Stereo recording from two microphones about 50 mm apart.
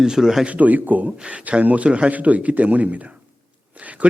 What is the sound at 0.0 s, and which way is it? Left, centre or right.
Speech, centre.